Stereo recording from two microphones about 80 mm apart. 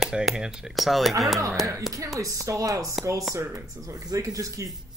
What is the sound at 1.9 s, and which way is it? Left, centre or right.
Speech, right.